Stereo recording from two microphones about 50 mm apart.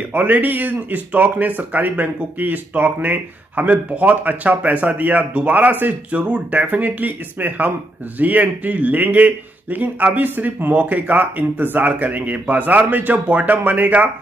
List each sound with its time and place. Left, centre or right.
0.1 s a man's voice: right
6.1 s speech: right
6.7 s a man's voice: right